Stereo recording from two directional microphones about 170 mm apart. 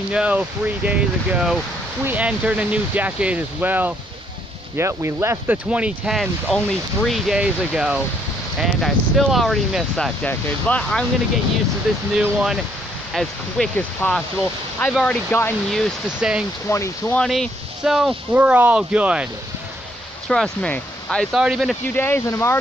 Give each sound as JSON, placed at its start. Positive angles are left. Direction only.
{"t": 0.1, "sound": "speech", "side_deg": -5}
{"t": 16.6, "sound": "speech", "side_deg": 15}
{"t": 17.2, "sound": "speech", "side_deg": 0}
{"t": 20.2, "sound": "speech", "side_deg": 5}
{"t": 21.9, "sound": "speech", "side_deg": 15}